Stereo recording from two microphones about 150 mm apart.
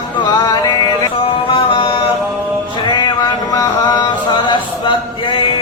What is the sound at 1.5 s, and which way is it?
Mantra, 35° left (ahead or behind).